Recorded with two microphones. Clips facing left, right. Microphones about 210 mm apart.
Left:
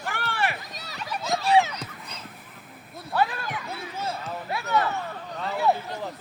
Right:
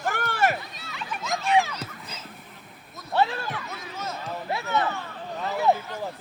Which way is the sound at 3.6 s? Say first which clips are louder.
Left 3 dB; 30° left (ahead or behind).